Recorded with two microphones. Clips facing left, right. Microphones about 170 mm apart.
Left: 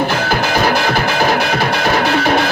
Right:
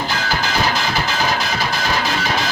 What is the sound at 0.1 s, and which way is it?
Music, 60° left (ahead or behind).